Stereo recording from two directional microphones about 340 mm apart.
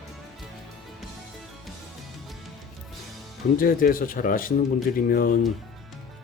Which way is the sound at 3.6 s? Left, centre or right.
Left.